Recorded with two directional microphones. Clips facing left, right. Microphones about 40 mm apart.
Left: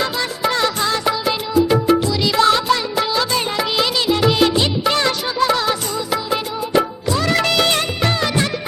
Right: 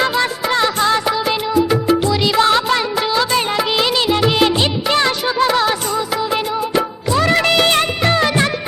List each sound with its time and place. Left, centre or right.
0.0 s music: right
0.6 s music: right
2.0 s music of bollywood: right
7.1 s music of bollywood: right